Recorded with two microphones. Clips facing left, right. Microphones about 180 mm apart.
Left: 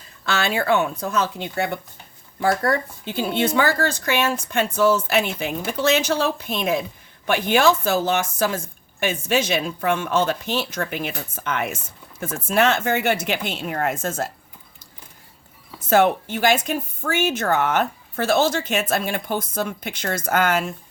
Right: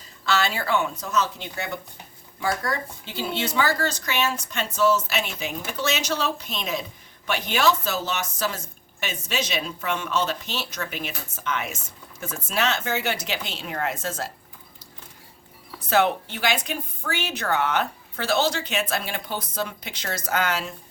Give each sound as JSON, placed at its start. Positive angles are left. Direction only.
{"t": 0.3, "sound": "speech", "side_deg": 55}
{"t": 15.9, "sound": "speech", "side_deg": 45}